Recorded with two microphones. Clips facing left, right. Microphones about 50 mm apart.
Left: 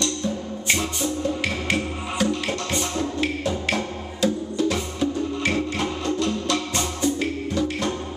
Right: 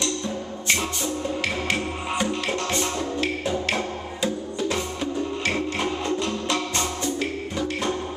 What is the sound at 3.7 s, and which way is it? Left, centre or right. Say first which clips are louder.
Music: even; centre.